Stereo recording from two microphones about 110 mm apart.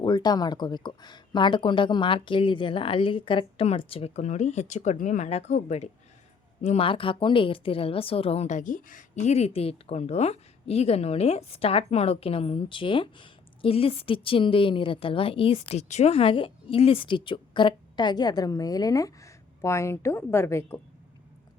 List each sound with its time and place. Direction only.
0.0 s a woman's voice: 40° left (ahead or behind); by 6.8 s 90° left
6.8 s a woman's voice: 50° left (ahead or behind); by 20.8 s 25° left (ahead or behind)